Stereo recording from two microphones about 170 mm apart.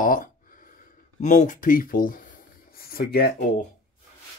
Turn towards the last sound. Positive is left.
turn(degrees=65)  # may be behind; listen again after turning